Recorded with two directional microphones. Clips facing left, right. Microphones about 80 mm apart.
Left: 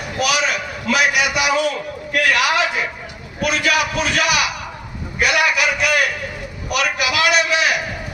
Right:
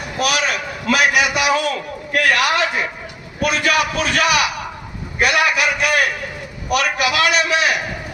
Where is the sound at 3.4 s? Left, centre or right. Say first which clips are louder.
Right 1 dB; right.